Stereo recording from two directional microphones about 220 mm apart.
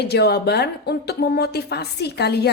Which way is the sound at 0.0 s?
45° left (ahead or behind).